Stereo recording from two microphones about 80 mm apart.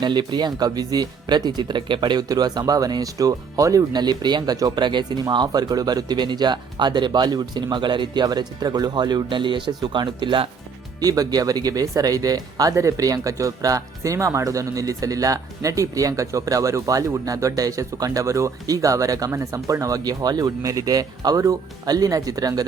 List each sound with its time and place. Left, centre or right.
0.0 s speech: right
2.2 s speech: right
3.9 s speech: right
5.5 s speech: right
11.0 s speech: right